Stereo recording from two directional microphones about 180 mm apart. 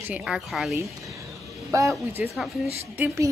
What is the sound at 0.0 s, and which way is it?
Speech, 5° right (ahead or behind).